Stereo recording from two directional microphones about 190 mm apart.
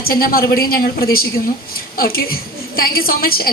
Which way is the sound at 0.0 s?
50° left (ahead or behind).